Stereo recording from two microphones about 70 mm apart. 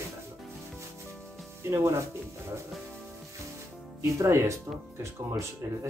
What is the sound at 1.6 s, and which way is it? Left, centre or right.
Speech, right.